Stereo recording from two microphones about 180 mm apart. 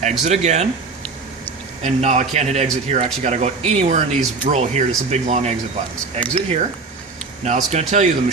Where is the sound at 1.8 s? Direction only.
40° right (ahead or behind).